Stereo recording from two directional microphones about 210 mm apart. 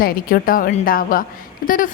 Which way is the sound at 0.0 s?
45° left (ahead or behind).